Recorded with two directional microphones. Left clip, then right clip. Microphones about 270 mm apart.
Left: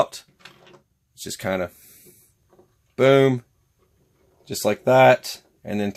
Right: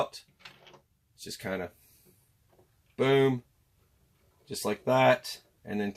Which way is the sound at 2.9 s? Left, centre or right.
Left.